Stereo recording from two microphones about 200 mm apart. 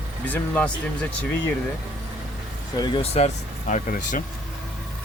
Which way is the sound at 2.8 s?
30° left (ahead or behind).